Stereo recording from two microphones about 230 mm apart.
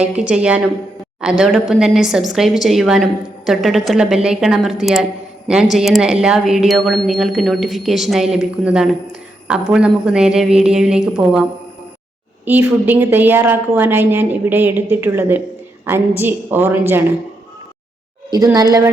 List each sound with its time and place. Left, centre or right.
0.0 s speech: centre
12.5 s a woman's voice: centre
18.3 s a woman's voice: centre